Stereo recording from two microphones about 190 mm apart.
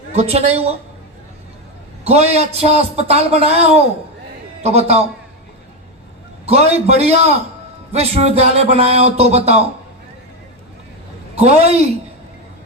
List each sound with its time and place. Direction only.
0.1 s a man's voice: 35° right (ahead or behind)
2.0 s a man's voice: 35° right (ahead or behind)
6.4 s a man's voice: 35° right (ahead or behind)
11.3 s a man's voice: 35° right (ahead or behind)